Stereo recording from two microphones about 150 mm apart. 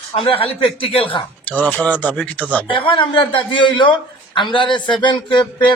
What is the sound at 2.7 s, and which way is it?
Speech, 35° left (ahead or behind).